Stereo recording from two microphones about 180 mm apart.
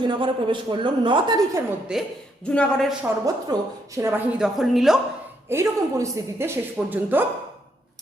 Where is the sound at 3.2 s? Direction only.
20° right (ahead or behind); by 4.9 s centre (ahead or behind).